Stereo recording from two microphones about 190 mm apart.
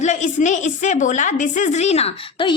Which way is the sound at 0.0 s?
40° left (ahead or behind).